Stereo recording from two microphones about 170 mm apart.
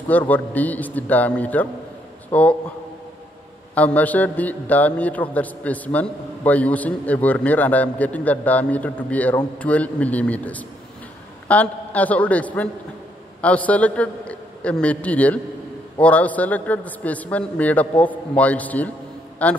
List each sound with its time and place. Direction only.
0.3 s a man's voice: 10° left (ahead or behind)
3.7 s a man's voice: 10° left (ahead or behind)